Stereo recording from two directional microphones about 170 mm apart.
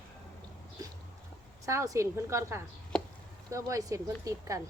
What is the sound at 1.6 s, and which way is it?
A woman's voice, 20° right (ahead or behind).